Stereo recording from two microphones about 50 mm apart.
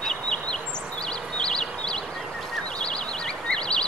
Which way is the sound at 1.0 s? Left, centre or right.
Centre.